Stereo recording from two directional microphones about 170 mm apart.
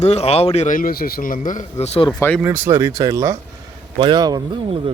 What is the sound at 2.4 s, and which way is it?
A man's voice, 10° right (ahead or behind).